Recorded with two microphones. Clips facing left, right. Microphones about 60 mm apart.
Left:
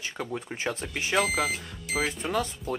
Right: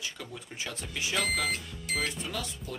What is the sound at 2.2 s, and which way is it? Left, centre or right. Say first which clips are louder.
Speech: left 8 dB; left.